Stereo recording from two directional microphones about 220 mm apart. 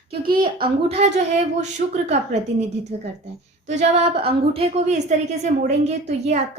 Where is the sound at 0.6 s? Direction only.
30° right (ahead or behind).